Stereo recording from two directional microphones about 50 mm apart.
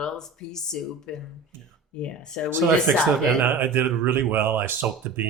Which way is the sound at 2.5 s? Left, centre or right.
Right.